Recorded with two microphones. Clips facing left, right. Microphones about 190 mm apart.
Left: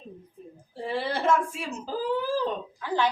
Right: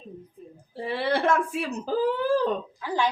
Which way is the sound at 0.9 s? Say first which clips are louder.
Right 1 dB; 65° right (ahead or behind).